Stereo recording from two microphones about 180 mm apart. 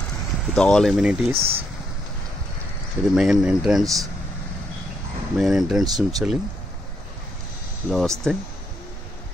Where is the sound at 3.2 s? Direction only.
5° right (ahead or behind).